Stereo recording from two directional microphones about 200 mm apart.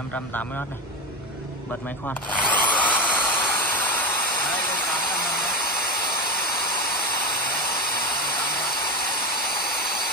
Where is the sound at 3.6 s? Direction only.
10° left (ahead or behind).